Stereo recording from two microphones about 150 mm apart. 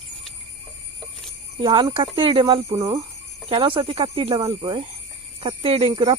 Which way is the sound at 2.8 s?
20° right (ahead or behind).